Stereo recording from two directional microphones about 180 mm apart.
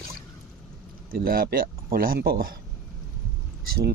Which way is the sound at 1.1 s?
55° right (ahead or behind).